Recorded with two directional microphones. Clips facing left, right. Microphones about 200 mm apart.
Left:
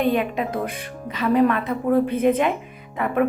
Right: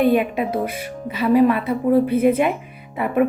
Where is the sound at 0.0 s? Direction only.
10° right (ahead or behind).